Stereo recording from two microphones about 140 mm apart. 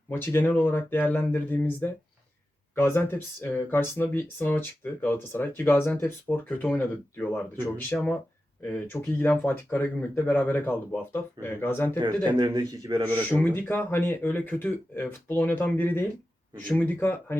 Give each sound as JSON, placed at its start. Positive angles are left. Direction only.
{"t": 0.1, "sound": "speech", "side_deg": 15}
{"t": 11.9, "sound": "a man's voice", "side_deg": -30}
{"t": 13.3, "sound": "speech", "side_deg": 15}